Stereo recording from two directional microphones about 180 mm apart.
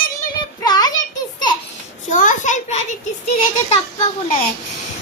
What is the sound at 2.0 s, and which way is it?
Speech, 45° left (ahead or behind).